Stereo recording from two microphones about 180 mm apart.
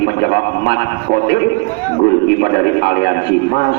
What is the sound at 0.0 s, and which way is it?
A man's voice, 60° left (ahead or behind).